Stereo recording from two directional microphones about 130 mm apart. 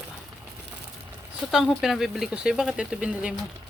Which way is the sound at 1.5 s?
Centre (ahead or behind).